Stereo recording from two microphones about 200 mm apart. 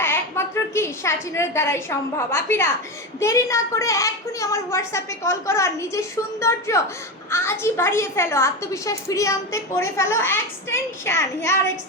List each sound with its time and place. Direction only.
0.0 s a woman's voice: 10° left (ahead or behind)